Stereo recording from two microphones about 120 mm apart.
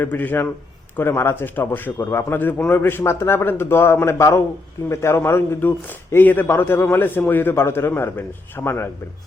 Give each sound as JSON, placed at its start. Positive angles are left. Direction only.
{"t": 0.0, "sound": "a man's voice", "side_deg": 15}